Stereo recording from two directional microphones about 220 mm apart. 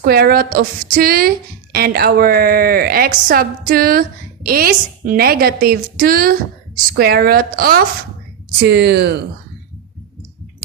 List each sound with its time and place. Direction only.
0.0 s a woman's voice: 45° right (ahead or behind)